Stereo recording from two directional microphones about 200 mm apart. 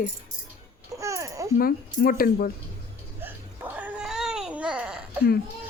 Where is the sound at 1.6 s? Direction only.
45° left (ahead or behind).